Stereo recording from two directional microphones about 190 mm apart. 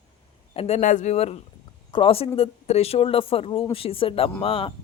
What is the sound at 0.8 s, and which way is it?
Speech, 40° left (ahead or behind).